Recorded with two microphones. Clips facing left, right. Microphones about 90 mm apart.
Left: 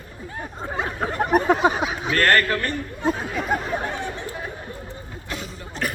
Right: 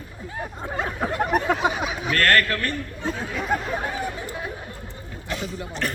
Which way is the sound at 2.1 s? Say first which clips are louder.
Left 1 dB; 20° left (ahead or behind).